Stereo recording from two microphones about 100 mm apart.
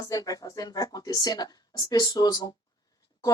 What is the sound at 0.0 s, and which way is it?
Speech, 35° left (ahead or behind).